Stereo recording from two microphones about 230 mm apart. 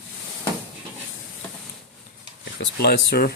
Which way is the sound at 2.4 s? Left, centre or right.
Left.